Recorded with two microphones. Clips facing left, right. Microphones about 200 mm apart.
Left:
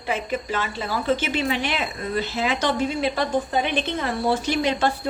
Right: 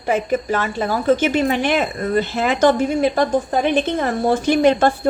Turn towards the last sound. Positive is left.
turn(degrees=-50)  # may be behind; listen again after turning